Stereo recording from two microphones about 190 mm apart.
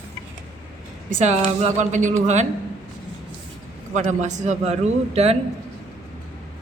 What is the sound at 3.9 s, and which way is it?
A man's voice, 40° right (ahead or behind).